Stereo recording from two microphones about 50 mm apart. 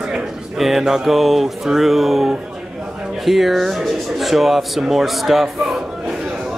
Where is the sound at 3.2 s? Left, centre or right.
Centre.